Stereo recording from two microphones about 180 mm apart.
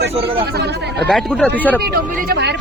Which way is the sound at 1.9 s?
65° right (ahead or behind).